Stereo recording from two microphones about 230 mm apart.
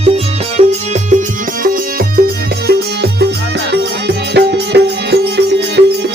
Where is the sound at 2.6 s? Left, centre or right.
Right.